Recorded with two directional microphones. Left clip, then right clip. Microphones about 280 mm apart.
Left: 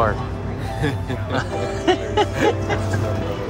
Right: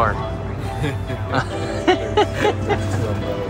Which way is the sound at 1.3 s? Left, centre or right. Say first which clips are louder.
Right 1 dB; centre.